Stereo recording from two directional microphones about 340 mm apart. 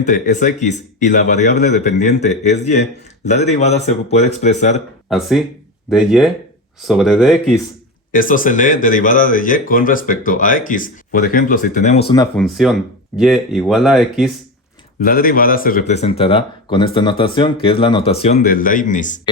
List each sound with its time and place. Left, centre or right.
0.0 s speech: left
5.0 s speech: centre
8.1 s speech: left
12.4 s speech: centre
15.0 s speech: left